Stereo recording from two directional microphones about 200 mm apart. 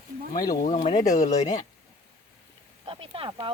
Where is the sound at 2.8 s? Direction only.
25° right (ahead or behind).